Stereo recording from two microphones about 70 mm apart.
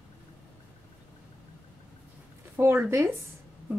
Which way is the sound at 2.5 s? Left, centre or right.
Right.